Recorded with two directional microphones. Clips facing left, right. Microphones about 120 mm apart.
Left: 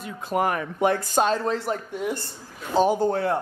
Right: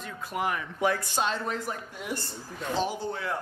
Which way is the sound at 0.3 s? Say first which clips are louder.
Left 7 dB; 45° left (ahead or behind).